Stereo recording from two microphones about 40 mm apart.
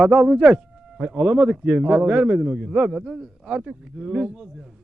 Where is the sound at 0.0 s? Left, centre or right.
Right.